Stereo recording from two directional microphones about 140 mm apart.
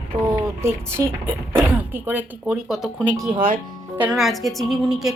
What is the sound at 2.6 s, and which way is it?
A woman's voice, 5° right (ahead or behind).